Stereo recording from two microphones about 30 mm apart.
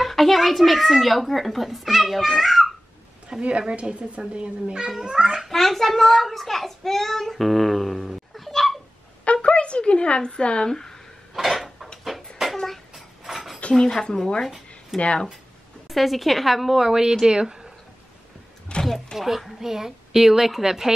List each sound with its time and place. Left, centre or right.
0.0 s a child's voice: centre
3.4 s a woman's voice: right
5.0 s speech: right
5.5 s a child's voice: centre
9.2 s speech: left
10.7 s speech: centre
11.3 s dishes: centre
12.1 s a sound: centre
13.7 s speech: centre
14.9 s a child's voice: centre
16.9 s speech: centre
18.7 s a sound: left
19.1 s a woman's voice: centre